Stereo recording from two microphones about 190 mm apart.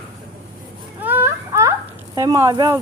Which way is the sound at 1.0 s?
10° right (ahead or behind).